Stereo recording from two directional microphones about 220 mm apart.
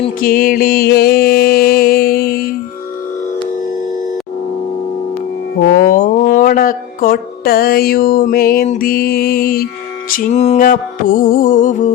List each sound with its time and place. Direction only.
0.2 s music: 40° left (ahead or behind)
5.7 s music: 40° left (ahead or behind)